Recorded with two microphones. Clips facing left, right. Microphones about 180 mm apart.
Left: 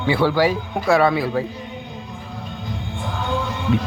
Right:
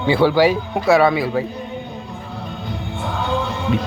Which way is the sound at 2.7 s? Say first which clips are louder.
Right 3 dB; 65° right (ahead or behind).